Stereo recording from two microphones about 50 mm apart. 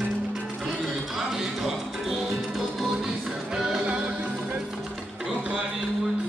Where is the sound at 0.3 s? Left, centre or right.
Centre; by 4.6 s right.